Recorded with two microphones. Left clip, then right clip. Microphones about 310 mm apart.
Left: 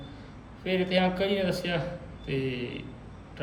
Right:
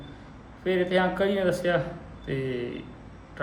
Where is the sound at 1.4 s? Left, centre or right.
Centre.